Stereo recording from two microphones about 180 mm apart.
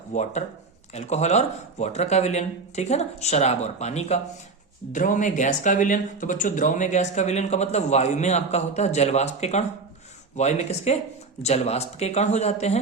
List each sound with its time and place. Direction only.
0.1 s speech: 40° left (ahead or behind)